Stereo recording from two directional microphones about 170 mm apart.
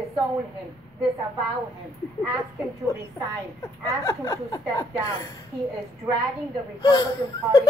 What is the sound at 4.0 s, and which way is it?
A child's voice, 15° left (ahead or behind).